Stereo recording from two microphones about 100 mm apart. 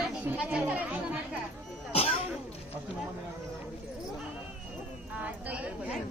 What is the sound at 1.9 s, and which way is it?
Music, 85° left.